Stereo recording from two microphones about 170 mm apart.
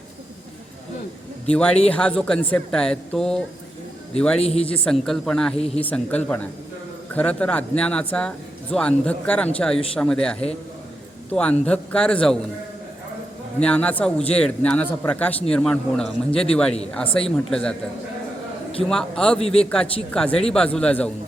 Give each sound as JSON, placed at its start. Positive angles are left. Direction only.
{"t": 1.5, "sound": "speech", "side_deg": 5}
{"t": 4.4, "sound": "a man's voice", "side_deg": 35}
{"t": 4.9, "sound": "speech", "side_deg": 5}
{"t": 5.5, "sound": "a man's voice", "side_deg": 35}
{"t": 5.8, "sound": "speech", "side_deg": 10}
{"t": 13.6, "sound": "speech", "side_deg": 5}
{"t": 18.9, "sound": "speech", "side_deg": 5}